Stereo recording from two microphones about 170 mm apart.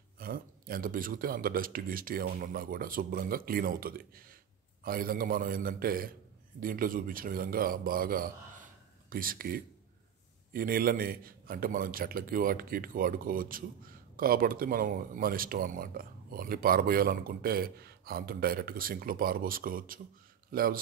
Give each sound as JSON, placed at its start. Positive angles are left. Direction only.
{"t": 0.2, "sound": "speech", "side_deg": -55}